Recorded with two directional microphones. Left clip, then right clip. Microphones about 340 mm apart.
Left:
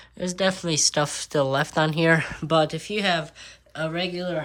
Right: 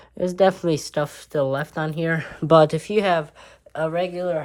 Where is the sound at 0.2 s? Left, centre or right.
Centre.